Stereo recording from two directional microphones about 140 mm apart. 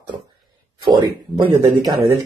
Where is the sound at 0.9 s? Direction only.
35° right (ahead or behind).